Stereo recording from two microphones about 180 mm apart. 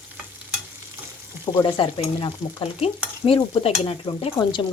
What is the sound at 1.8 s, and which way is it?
Speech, 30° left (ahead or behind).